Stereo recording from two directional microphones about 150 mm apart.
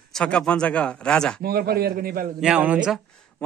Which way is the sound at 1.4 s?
90° right.